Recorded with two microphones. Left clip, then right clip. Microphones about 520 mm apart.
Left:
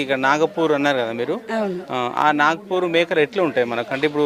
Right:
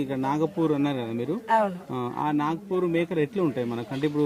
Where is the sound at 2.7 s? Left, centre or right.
Left.